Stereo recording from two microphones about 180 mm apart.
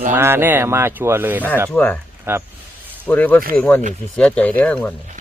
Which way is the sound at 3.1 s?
10° left (ahead or behind).